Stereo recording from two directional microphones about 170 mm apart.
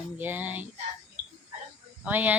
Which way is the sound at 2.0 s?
10° right (ahead or behind).